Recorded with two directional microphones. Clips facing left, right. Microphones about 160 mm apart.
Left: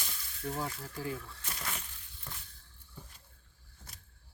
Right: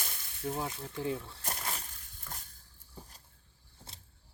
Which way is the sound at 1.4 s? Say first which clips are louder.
Right 3 dB; 40° right (ahead or behind).